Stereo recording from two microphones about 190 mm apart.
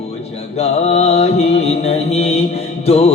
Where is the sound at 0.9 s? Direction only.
35° left (ahead or behind).